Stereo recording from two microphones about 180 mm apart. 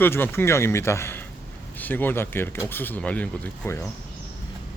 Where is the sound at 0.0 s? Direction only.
10° left (ahead or behind).